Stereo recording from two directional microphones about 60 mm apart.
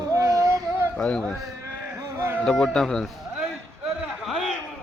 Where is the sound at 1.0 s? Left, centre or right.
Centre.